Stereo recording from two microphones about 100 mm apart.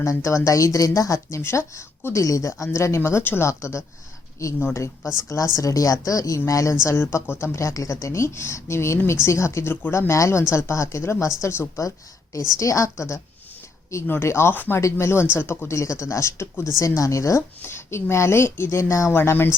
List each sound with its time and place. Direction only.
0.0 s a woman's voice: 30° left (ahead or behind)